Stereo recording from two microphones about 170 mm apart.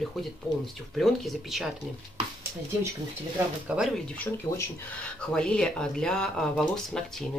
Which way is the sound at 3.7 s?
10° right (ahead or behind).